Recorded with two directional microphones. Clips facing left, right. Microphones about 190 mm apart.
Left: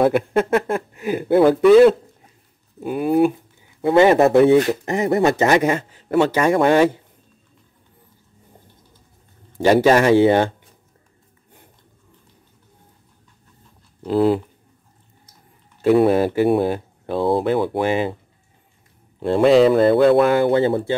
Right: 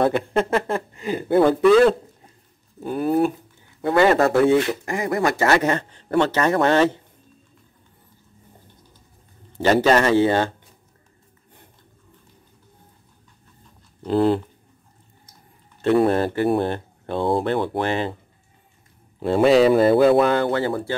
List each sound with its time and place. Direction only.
0.0 s speech: 5° left (ahead or behind)
3.5 s speech: 20° left (ahead or behind)
9.6 s speech: 10° left (ahead or behind)
14.0 s speech: 5° left (ahead or behind)
15.8 s speech: 5° left (ahead or behind)
19.1 s speech: centre (ahead or behind)
20.3 s speech: 20° left (ahead or behind)